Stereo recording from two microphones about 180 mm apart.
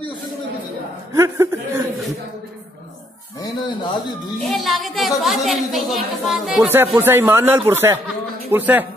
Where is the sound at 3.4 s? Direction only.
25° left (ahead or behind).